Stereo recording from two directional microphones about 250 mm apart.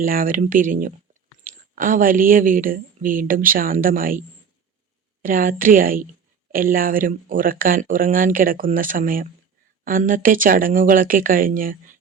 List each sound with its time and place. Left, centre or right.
0.0 s speech: right
5.2 s speech: right